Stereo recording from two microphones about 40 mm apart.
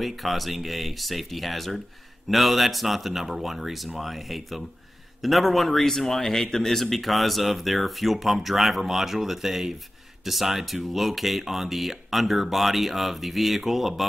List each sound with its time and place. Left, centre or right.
0.0 s speech: centre